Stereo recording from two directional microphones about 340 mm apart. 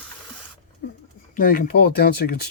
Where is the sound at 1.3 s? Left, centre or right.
Left.